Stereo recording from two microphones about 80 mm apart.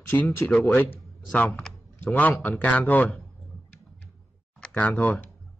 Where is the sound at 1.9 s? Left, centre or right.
Left.